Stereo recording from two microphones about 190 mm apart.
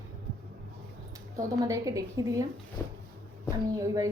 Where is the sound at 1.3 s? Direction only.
20° right (ahead or behind).